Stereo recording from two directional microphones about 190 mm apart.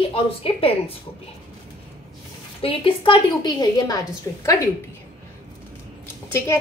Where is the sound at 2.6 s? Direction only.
30° left (ahead or behind).